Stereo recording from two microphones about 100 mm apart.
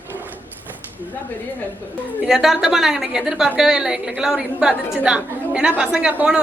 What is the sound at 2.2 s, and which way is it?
A woman's voice, 5° right (ahead or behind).